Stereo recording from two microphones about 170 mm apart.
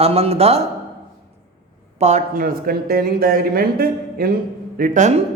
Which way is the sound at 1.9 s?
40° right (ahead or behind).